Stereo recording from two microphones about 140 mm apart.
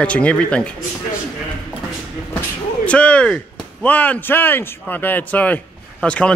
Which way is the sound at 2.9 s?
10° left (ahead or behind).